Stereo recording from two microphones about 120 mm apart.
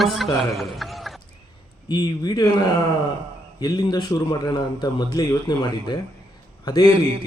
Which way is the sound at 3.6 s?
35° left (ahead or behind).